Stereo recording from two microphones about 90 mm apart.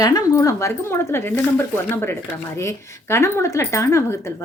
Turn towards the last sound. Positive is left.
turn(degrees=30)  # may be behind; listen again after turning